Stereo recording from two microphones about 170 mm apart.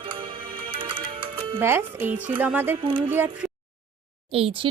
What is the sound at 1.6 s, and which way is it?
Speech, 15° right (ahead or behind).